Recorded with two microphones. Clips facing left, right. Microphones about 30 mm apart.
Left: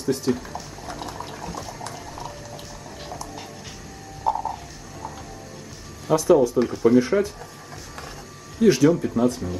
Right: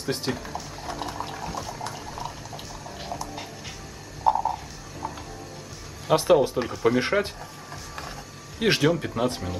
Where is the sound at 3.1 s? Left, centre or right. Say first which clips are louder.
Right 2 dB; centre.